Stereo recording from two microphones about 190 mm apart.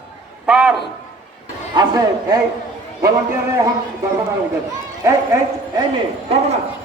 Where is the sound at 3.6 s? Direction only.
15° right (ahead or behind).